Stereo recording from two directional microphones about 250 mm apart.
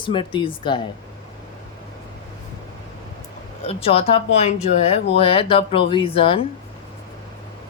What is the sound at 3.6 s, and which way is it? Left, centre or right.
Speech, left.